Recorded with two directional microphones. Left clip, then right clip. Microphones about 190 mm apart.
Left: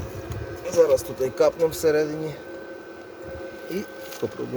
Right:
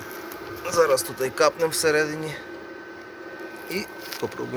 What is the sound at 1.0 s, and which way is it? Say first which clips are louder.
A man's voice: even; 20° left (ahead or behind).